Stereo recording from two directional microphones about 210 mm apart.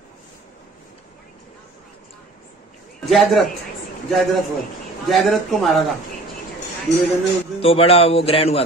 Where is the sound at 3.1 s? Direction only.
Centre (ahead or behind).